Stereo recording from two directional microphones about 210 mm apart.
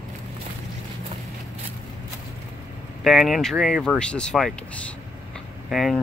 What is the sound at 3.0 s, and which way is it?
Speech, centre (ahead or behind).